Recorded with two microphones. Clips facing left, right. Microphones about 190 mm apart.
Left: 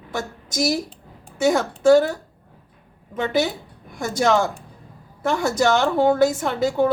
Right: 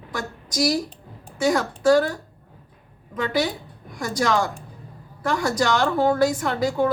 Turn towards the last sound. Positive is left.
turn(degrees=25)  # may be behind; listen again after turning